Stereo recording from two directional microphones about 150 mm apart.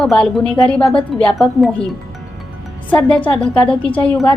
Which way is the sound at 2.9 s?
5° left (ahead or behind).